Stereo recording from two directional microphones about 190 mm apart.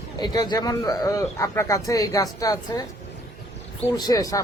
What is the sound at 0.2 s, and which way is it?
Speech, 20° left (ahead or behind).